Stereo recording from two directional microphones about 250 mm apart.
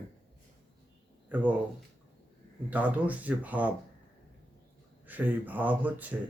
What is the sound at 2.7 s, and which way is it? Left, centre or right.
Speech, centre.